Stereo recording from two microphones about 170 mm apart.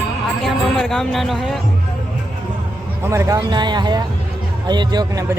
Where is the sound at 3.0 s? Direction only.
15° right (ahead or behind).